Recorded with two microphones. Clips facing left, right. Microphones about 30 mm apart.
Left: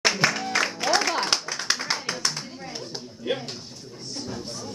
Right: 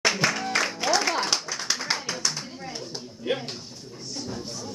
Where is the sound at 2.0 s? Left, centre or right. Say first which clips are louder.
Left 1 dB; left.